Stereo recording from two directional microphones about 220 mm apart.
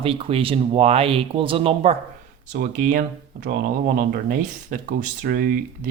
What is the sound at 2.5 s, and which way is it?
Speech, 35° right (ahead or behind).